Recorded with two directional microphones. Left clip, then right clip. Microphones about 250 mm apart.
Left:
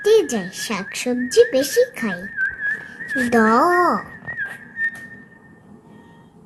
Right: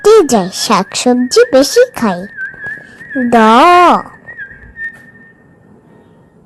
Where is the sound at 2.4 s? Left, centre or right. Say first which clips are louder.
Even; centre.